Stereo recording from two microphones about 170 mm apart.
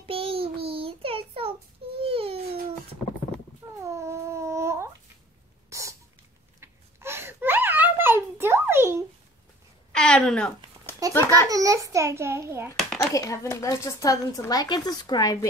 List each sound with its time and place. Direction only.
0.0 s child singing: 35° right (ahead or behind)
2.0 s babbling: 35° right (ahead or behind)
3.8 s a sound: 15° right (ahead or behind)
5.7 s cough: 15° right (ahead or behind)
6.6 s a sound: 15° right (ahead or behind)
9.9 s a sound: 5° left (ahead or behind)
11.1 s a child's voice: 15° left (ahead or behind)
11.4 s a child's voice: 20° right (ahead or behind)
13.1 s speech: 20° left (ahead or behind)